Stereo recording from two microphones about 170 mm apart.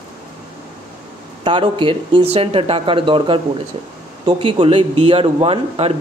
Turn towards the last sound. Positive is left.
turn(degrees=-35)  # may be behind; listen again after turning